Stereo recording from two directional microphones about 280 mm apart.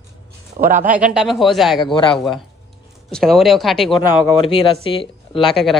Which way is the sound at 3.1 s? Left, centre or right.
Centre.